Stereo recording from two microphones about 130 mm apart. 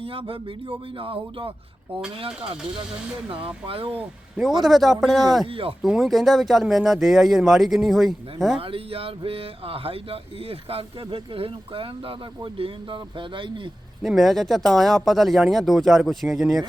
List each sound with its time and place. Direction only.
0.0 s speech: 45° right (ahead or behind)
4.6 s speech: centre (ahead or behind)
5.5 s speech: 45° right (ahead or behind)
5.8 s speech: centre (ahead or behind)
8.5 s speech: 45° right (ahead or behind)
14.0 s speech: centre (ahead or behind)